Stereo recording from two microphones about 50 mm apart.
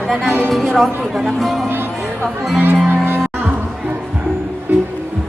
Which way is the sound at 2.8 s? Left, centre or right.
Right.